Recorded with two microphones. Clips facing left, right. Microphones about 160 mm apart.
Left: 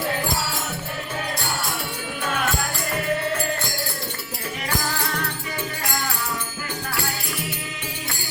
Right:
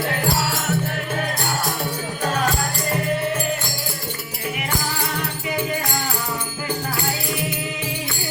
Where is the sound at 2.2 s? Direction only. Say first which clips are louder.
Right 4 dB; 40° right (ahead or behind).